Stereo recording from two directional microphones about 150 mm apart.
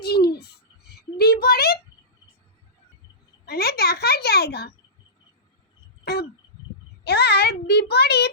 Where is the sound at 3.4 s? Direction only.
90° left.